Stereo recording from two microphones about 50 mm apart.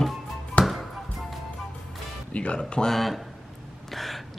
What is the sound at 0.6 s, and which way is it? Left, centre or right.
Basketball bounce, left.